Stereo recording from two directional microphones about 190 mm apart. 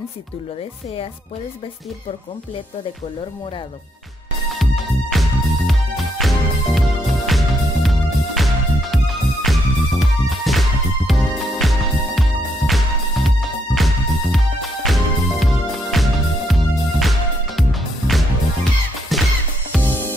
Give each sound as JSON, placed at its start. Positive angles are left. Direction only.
{"t": 4.5, "sound": "music", "side_deg": 0}
{"t": 19.7, "sound": "music", "side_deg": 10}